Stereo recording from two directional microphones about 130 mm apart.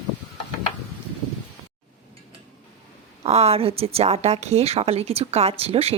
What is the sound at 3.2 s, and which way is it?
A woman's voice, 55° right (ahead or behind).